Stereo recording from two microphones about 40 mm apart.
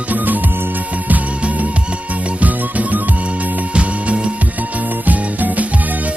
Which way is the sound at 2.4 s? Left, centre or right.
Right.